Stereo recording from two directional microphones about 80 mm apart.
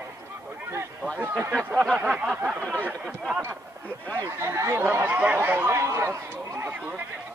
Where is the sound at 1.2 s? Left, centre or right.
Right.